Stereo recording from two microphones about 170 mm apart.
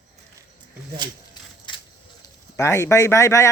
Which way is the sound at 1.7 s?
30° left (ahead or behind).